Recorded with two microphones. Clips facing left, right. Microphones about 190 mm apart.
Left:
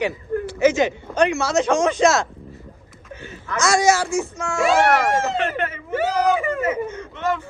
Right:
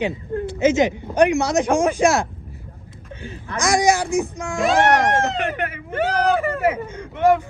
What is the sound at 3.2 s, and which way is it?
Speech, 35° right (ahead or behind).